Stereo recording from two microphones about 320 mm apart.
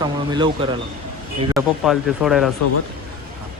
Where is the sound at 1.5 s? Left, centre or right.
Centre.